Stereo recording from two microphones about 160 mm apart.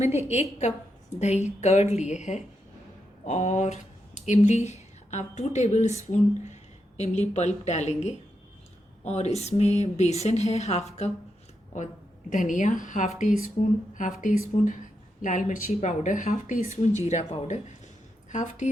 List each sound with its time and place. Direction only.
1.2 s a woman's voice: 45° left (ahead or behind)